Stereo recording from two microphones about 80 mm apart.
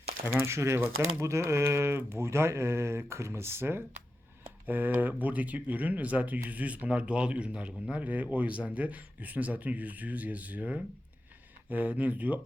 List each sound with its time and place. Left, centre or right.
0.3 s speech: right